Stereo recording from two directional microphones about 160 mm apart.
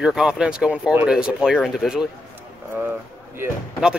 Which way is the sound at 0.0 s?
5° right (ahead or behind).